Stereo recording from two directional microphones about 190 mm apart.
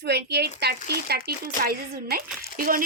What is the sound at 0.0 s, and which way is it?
A woman's voice, 60° right (ahead or behind).